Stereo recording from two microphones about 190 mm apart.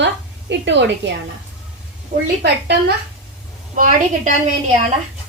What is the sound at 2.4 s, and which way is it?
Speech, 60° right (ahead or behind).